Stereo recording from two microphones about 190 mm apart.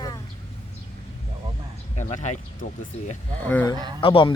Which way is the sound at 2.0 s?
40° left (ahead or behind).